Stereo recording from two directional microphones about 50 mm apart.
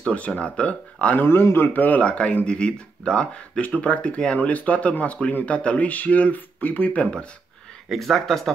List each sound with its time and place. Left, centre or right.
0.1 s speech: left
1.2 s a man's voice: left
1.7 s speech: left
7.9 s speech: centre